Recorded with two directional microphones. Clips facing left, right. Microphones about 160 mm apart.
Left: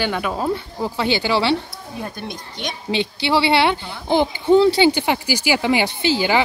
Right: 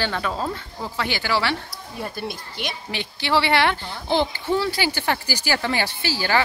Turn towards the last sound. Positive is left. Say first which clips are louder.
# left 5 dB
turn(degrees=20)  # may be behind; listen again after turning